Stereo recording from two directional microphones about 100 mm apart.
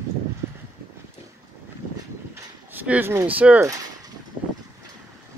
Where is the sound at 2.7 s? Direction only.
20° right (ahead or behind).